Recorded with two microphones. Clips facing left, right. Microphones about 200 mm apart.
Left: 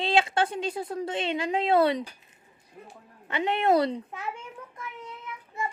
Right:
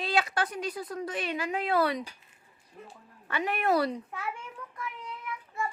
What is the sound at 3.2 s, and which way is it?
A child's voice, 25° left (ahead or behind).